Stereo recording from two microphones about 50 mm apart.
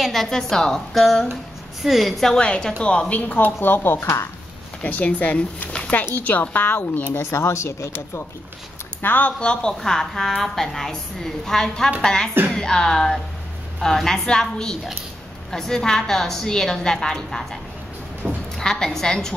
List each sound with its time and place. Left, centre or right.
0.0 s a woman's voice: centre
2.3 s a woman's voice: centre
3.6 s speech: left
4.8 s speech: left
7.2 s speech: left
9.0 s speech: left
9.4 s a woman's voice: centre
18.2 s a sound: right
18.6 s a woman's voice: centre